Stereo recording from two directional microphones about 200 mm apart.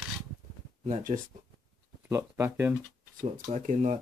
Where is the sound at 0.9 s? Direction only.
40° right (ahead or behind).